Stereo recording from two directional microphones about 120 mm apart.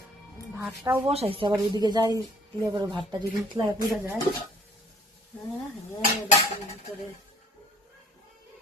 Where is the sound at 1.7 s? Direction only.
35° right (ahead or behind).